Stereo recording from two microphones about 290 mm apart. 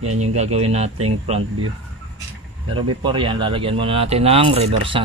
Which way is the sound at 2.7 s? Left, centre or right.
Centre.